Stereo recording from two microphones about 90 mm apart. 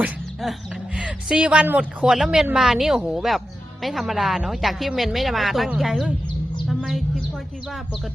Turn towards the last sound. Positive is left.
turn(degrees=0)  # may be behind; listen again after turning